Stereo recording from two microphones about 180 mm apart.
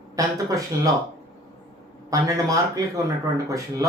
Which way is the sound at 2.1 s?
20° right (ahead or behind).